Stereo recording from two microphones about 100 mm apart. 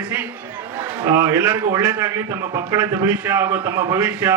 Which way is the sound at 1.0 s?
35° right (ahead or behind).